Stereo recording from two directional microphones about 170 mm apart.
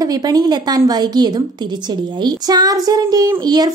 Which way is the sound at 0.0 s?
20° right (ahead or behind).